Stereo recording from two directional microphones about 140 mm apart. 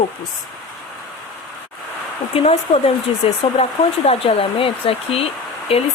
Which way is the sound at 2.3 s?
45° left (ahead or behind).